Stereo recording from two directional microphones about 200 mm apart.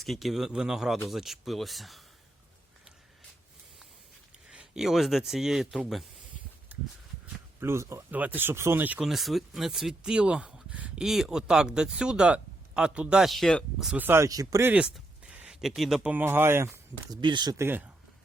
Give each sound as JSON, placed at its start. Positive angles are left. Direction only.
{"t": 0.0, "sound": "speech", "side_deg": 0}
{"t": 4.5, "sound": "speech", "side_deg": -5}
{"t": 6.7, "sound": "a sound", "side_deg": -10}
{"t": 7.6, "sound": "speech", "side_deg": -15}
{"t": 17.1, "sound": "speech", "side_deg": -25}